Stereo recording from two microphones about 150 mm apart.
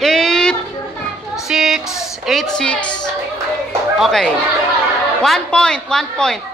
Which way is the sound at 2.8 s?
30° left (ahead or behind).